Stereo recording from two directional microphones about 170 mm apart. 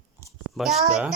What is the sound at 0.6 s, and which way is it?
Speech, centre (ahead or behind).